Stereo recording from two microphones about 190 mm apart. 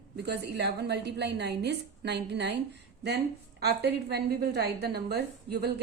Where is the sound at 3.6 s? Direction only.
60° right (ahead or behind).